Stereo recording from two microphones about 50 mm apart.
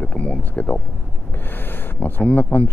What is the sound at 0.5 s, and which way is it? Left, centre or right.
Speech, left.